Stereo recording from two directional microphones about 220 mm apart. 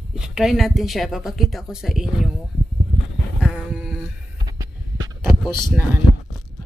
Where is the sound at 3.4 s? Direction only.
5° right (ahead or behind).